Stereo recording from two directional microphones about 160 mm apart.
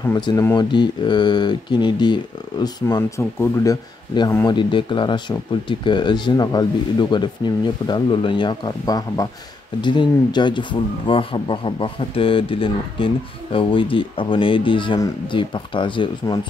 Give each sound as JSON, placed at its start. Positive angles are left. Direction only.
{"t": 0.2, "sound": "speech", "side_deg": 25}